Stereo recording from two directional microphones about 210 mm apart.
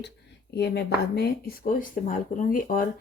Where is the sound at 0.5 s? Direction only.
50° left (ahead or behind).